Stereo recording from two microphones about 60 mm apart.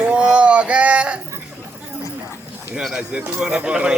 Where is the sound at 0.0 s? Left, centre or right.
Centre.